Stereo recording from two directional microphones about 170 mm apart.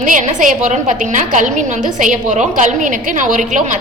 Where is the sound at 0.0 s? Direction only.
50° right (ahead or behind).